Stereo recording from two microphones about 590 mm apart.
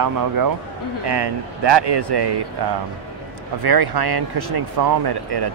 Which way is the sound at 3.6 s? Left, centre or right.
Right.